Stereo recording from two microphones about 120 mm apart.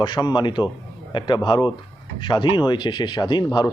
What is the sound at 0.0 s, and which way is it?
A man's voice, 40° left (ahead or behind).